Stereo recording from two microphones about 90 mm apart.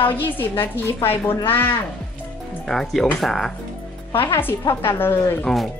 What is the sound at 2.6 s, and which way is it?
Speech, 5° left (ahead or behind).